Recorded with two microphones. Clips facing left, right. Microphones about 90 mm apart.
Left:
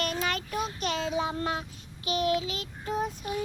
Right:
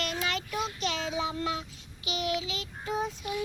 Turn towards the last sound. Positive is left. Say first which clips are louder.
# left 1 dB
turn(degrees=35)  # may be behind; listen again after turning